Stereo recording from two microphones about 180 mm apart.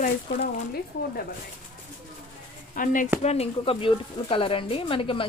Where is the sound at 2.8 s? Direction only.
50° left (ahead or behind).